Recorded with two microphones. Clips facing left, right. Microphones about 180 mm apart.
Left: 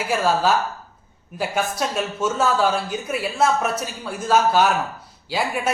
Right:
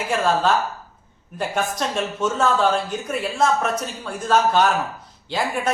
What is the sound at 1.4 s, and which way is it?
Speech, 5° left (ahead or behind).